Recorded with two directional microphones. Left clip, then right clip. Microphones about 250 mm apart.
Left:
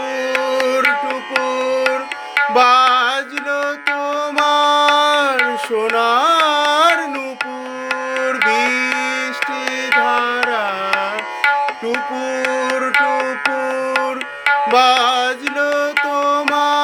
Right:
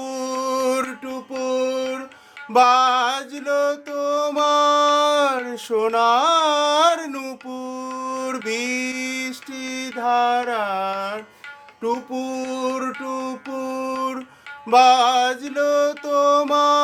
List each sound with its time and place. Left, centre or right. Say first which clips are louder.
0.4 s music: left 6 dB; centre
4.0 s carnatic music: even; centre
5.7 s music: even; centre
8.4 s music: left 10 dB; centre
10.1 s music: left 1 dB; centre
10.5 s carnatic music: left 4 dB; centre
11.4 s tabla: left 11 dB; left
12.9 s music: left 13 dB; left
14.7 s music: right 2 dB; centre